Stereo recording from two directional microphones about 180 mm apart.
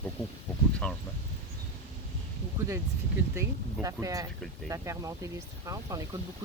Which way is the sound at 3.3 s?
15° right (ahead or behind).